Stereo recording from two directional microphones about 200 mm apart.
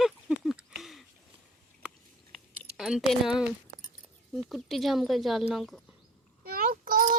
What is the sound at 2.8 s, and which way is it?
Speech, centre (ahead or behind).